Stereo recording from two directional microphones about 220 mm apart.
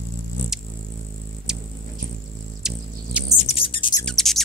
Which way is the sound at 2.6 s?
Centre (ahead or behind).